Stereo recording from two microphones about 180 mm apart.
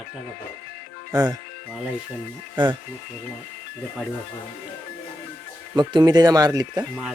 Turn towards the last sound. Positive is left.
turn(degrees=-20)  # may be behind; listen again after turning